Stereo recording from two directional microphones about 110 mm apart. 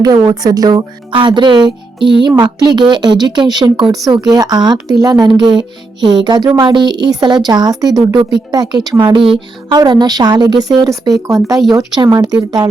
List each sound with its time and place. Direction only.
0.0 s speech: 35° right (ahead or behind)
9.0 s speech: 50° right (ahead or behind)